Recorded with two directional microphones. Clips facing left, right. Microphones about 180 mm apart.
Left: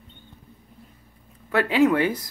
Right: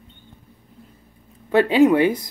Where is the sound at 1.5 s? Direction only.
20° right (ahead or behind).